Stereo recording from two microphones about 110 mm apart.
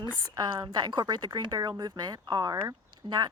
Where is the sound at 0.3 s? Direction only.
40° right (ahead or behind).